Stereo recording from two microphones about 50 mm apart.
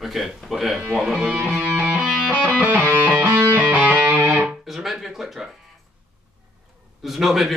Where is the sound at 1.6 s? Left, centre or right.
Right.